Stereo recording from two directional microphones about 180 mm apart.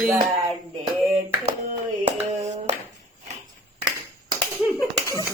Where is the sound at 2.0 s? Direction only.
40° right (ahead or behind).